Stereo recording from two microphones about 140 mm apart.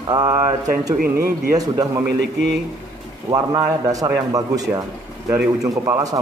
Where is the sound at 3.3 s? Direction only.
30° right (ahead or behind).